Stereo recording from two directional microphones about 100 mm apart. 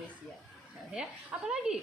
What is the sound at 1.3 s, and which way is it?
Speech, 15° right (ahead or behind).